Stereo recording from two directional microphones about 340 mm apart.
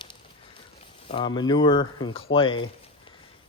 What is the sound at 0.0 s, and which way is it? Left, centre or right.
Horse, centre.